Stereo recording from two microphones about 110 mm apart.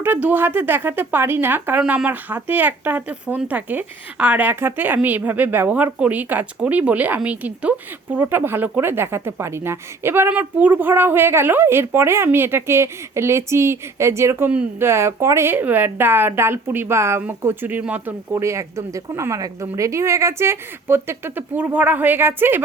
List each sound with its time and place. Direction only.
0.0 s speech: 15° right (ahead or behind)